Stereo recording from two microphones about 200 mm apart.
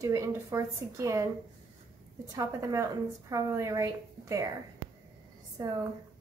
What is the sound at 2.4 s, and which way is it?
A woman's voice, 15° right (ahead or behind).